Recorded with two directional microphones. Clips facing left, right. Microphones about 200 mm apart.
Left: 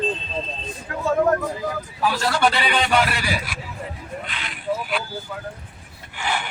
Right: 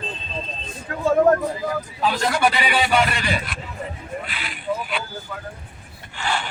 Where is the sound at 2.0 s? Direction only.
20° right (ahead or behind); by 5.0 s centre (ahead or behind).